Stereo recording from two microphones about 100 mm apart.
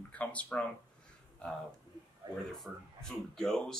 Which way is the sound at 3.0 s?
5° left (ahead or behind).